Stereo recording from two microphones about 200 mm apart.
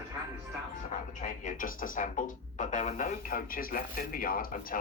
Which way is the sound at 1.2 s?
40° left (ahead or behind).